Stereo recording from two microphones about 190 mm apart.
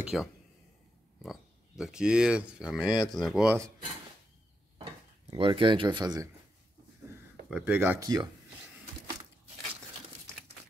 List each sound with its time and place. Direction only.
0.0 s speech: 5° right (ahead or behind)
5.3 s speech: 25° right (ahead or behind)
7.4 s speech: 5° right (ahead or behind)
8.0 s speech: 20° right (ahead or behind)